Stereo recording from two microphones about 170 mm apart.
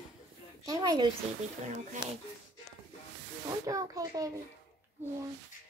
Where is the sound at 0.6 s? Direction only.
25° right (ahead or behind).